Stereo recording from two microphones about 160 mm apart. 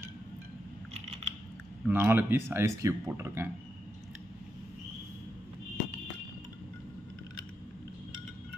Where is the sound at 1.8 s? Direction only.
10° right (ahead or behind).